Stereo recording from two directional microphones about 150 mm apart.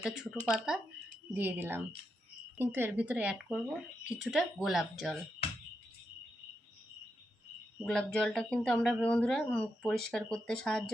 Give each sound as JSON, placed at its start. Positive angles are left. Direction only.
{"t": 0.0, "sound": "a woman's voice", "side_deg": -5}
{"t": 3.3, "sound": "speech", "side_deg": 5}
{"t": 5.4, "sound": "frog", "side_deg": 40}
{"t": 7.8, "sound": "speech", "side_deg": 5}